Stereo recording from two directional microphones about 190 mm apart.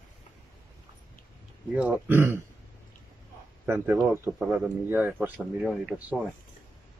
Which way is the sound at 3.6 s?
10° right (ahead or behind).